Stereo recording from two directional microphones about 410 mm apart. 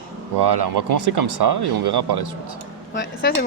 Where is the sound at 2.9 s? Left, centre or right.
Left.